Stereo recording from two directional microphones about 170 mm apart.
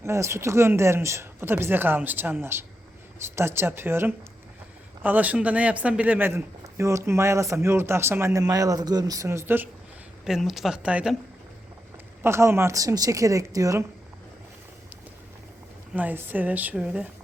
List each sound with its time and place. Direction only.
0.0 s speech: 15° right (ahead or behind)
10.2 s speech: centre (ahead or behind)
12.2 s speech: 15° right (ahead or behind)
16.0 s speech: 10° right (ahead or behind)